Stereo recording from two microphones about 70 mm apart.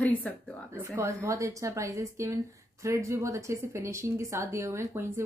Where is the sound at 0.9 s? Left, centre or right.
Right.